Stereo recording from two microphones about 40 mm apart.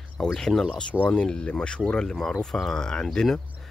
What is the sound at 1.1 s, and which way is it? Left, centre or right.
Speech, left.